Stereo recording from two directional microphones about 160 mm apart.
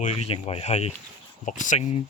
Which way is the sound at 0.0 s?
45° left (ahead or behind).